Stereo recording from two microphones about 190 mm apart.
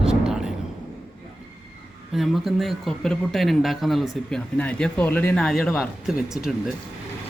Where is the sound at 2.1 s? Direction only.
Centre (ahead or behind).